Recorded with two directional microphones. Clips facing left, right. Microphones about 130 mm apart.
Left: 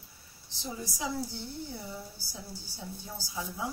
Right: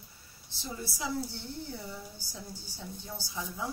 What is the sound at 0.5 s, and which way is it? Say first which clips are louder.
A woman's voice: left 1 dB; 15° left (ahead or behind).